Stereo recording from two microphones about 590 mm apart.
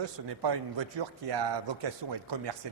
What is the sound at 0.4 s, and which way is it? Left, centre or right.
Speech, right.